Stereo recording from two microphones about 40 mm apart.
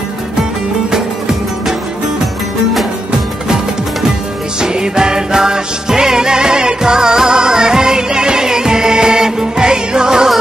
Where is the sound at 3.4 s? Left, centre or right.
Centre.